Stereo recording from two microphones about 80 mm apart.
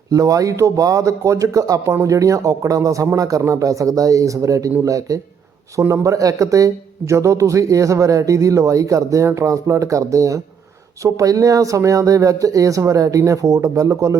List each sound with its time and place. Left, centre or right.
0.1 s speech: right